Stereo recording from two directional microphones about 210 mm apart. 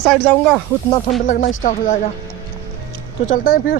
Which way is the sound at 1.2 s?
40° left (ahead or behind).